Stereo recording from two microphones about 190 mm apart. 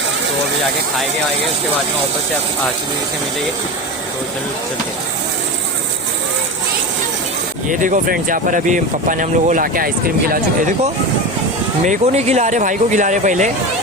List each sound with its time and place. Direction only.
7.7 s speech: 45° right (ahead or behind)
11.9 s speech: 35° right (ahead or behind)